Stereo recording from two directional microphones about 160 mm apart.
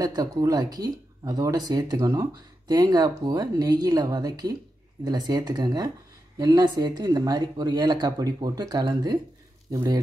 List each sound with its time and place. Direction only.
0.0 s speech: 25° right (ahead or behind)